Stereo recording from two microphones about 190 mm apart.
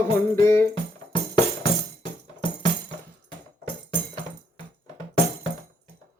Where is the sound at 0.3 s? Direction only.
15° left (ahead or behind).